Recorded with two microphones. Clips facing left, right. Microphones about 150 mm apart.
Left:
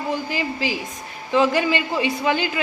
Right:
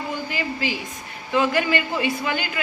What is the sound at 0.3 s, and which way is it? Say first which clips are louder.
A woman's voice: left 2 dB; 35° left (ahead or behind).